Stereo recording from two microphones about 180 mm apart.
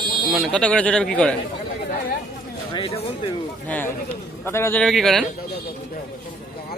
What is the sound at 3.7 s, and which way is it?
A man's voice, 10° left (ahead or behind).